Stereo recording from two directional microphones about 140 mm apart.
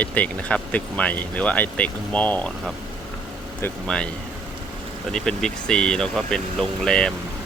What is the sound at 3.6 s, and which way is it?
Speech, 5° left (ahead or behind).